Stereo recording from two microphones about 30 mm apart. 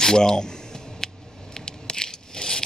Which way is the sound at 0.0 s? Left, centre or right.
Left.